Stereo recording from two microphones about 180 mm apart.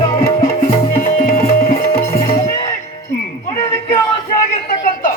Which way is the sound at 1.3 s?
50° left (ahead or behind).